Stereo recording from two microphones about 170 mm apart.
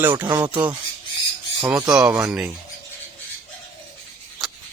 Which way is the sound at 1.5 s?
15° right (ahead or behind).